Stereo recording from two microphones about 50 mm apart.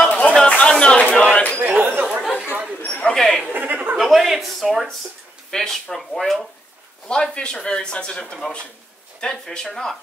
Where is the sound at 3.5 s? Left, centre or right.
Right.